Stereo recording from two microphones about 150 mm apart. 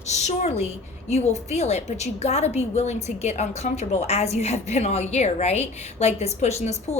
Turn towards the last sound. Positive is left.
turn(degrees=45)  # may be behind; listen again after turning